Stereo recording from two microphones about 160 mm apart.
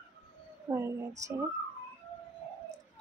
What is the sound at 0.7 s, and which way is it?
Speech, 15° right (ahead or behind).